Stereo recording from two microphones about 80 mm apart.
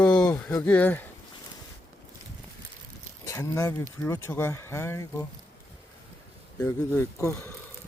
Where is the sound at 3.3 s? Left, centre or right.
Left.